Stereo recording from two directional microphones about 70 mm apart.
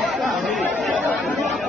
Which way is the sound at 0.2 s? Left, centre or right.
Centre.